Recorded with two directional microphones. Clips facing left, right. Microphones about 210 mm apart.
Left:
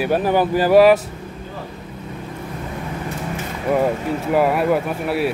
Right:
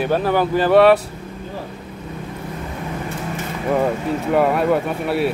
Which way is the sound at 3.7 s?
5° left (ahead or behind).